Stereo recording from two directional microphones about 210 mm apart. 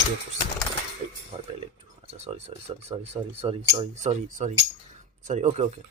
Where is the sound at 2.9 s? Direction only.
20° right (ahead or behind).